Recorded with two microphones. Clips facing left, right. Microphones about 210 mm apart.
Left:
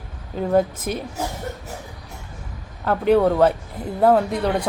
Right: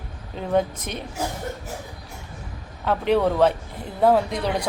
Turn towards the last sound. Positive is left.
turn(degrees=5)  # may be behind; listen again after turning